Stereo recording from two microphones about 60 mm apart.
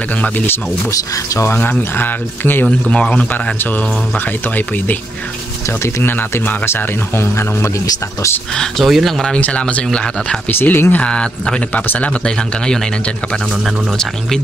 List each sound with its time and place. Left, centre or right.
1.6 s speech: left
2.6 s speech: centre
6.0 s speech: left
8.5 s speech: centre
9.3 s speech: centre
9.8 s speech: centre
10.5 s speech: left
11.1 s speech: centre
12.3 s speech: centre